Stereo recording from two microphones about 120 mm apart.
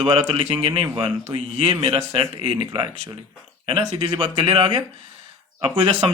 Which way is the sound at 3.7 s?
50° right (ahead or behind).